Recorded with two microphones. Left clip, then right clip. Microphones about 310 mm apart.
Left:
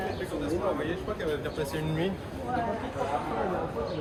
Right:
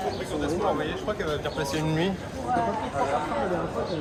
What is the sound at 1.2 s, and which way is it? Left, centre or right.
Speech, right.